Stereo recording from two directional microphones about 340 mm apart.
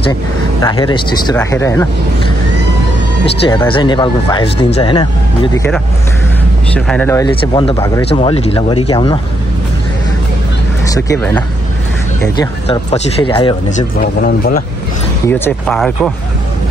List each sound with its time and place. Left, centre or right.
0.6 s speech: centre
3.4 s speech: centre
6.7 s speech: centre
10.9 s speech: centre
12.4 s speech: centre
15.2 s speech: centre